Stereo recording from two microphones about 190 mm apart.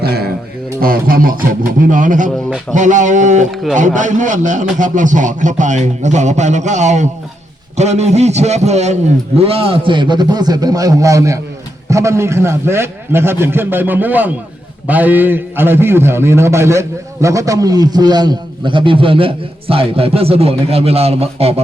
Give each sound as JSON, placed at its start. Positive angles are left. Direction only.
{"t": 0.0, "sound": "a sound", "side_deg": -55}
{"t": 0.8, "sound": "speech", "side_deg": -50}
{"t": 3.5, "sound": "a man's voice", "side_deg": 0}
{"t": 3.8, "sound": "a man's voice", "side_deg": -40}